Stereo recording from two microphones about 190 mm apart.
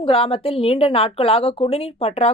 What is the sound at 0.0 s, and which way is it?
A woman's voice, 30° left (ahead or behind).